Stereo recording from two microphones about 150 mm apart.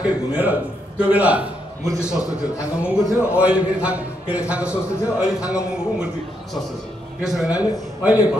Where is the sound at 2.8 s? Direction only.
10° right (ahead or behind).